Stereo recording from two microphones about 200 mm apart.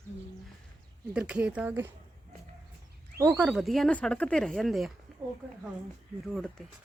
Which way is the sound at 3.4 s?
Centre (ahead or behind).